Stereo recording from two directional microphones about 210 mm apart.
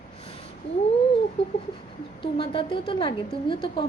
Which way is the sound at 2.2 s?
25° left (ahead or behind).